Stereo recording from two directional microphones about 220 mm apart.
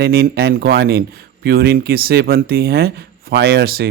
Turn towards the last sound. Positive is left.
turn(degrees=-45)  # may be behind; listen again after turning